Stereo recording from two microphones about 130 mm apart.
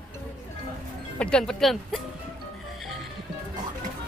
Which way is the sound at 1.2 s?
5° left (ahead or behind).